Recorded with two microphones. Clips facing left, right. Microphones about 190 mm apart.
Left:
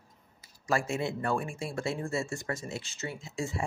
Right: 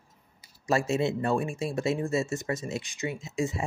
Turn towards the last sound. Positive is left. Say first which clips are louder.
# right 5 dB
turn(degrees=-20)  # may be behind; listen again after turning